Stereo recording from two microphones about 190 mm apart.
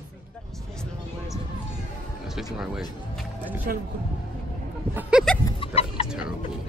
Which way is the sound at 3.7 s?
50° right (ahead or behind).